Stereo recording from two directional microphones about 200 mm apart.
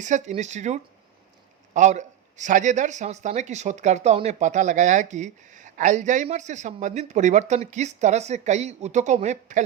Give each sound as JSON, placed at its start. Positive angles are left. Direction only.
{"t": 0.0, "sound": "speech", "side_deg": -35}